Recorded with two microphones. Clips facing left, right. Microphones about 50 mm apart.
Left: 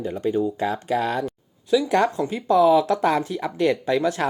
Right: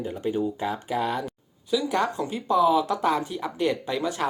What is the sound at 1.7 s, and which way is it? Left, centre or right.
Speech, left.